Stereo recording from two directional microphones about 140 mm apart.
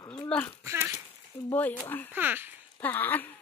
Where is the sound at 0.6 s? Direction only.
20° right (ahead or behind).